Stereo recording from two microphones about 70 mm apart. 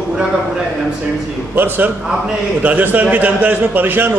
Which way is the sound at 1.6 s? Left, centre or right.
Right.